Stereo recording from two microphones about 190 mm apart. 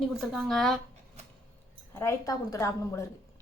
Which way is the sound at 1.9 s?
15° left (ahead or behind).